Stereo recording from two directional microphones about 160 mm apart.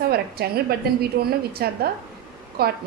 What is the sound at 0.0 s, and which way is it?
A woman's voice, 75° right (ahead or behind).